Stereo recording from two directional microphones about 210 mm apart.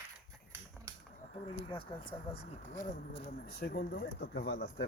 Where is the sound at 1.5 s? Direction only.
25° left (ahead or behind).